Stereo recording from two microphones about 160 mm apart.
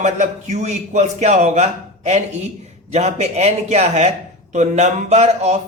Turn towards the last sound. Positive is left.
turn(degrees=-45)  # may be behind; listen again after turning